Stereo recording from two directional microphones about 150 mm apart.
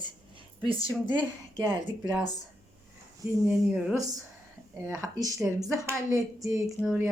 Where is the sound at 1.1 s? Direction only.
10° right (ahead or behind).